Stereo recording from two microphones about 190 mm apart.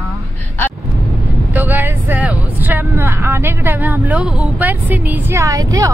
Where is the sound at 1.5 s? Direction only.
10° right (ahead or behind).